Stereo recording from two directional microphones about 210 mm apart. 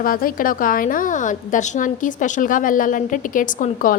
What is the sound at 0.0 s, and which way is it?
A woman's voice, 45° left (ahead or behind).